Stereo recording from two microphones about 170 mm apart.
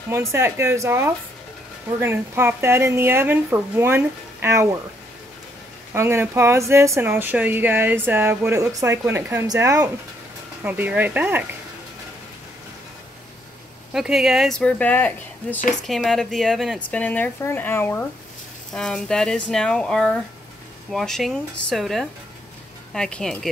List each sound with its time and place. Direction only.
0.1 s speech: 15° right (ahead or behind)
5.9 s speech: 15° right (ahead or behind)
10.6 s speech: 10° right (ahead or behind)
13.9 s speech: centre (ahead or behind)